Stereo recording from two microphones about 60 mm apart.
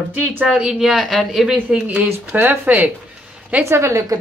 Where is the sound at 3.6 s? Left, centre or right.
Right.